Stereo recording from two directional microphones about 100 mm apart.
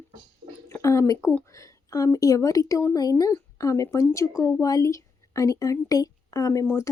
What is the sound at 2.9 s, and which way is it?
A woman's voice, 40° left (ahead or behind).